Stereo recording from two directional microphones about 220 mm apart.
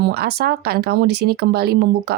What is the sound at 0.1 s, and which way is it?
Speech, 45° right (ahead or behind).